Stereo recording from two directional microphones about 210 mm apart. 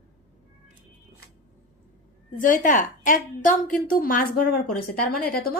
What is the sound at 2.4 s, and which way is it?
Speech, 40° left (ahead or behind).